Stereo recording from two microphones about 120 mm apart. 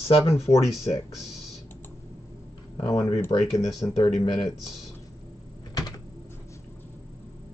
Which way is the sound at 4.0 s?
35° left (ahead or behind).